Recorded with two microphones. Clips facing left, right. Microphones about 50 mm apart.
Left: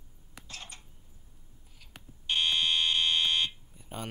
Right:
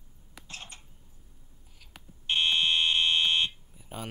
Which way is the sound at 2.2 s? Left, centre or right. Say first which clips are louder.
Right 2 dB; right.